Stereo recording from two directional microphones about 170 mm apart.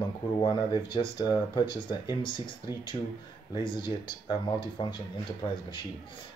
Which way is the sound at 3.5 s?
30° left (ahead or behind).